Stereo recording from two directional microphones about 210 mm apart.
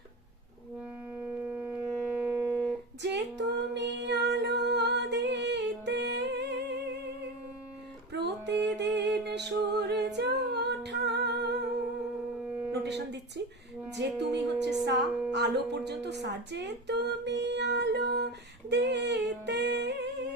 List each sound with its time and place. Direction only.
1.2 s a sound: 10° right (ahead or behind)
3.0 s female singing: 55° right (ahead or behind)
8.1 s music: 55° right (ahead or behind)
9.2 s a capella: 55° right (ahead or behind)
12.7 s a sound: 55° right (ahead or behind)
13.9 s music: 55° right (ahead or behind)